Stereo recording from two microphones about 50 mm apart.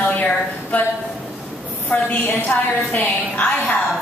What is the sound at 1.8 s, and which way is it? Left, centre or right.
A woman's voice, left.